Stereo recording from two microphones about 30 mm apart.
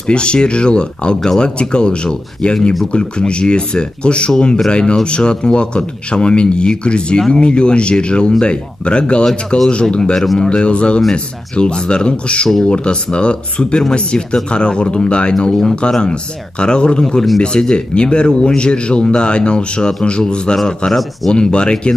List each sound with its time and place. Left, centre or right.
0.0 s speech: left